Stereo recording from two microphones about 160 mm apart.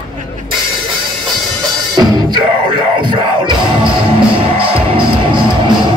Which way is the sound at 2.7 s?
30° right (ahead or behind).